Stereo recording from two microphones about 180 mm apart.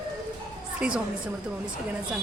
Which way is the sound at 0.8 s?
5° right (ahead or behind).